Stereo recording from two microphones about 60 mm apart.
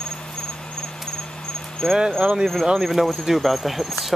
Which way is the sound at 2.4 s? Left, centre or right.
Centre.